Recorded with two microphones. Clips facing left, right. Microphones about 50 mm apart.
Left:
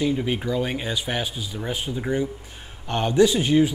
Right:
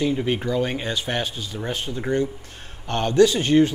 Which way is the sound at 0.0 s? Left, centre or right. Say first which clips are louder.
Right 1 dB; centre.